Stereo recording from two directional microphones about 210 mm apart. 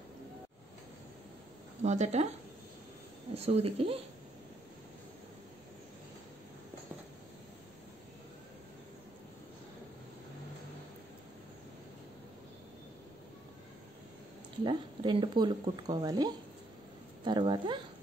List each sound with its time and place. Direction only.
1.8 s speech: 35° right (ahead or behind)
3.3 s speech: 30° right (ahead or behind)
14.6 s speech: 20° right (ahead or behind)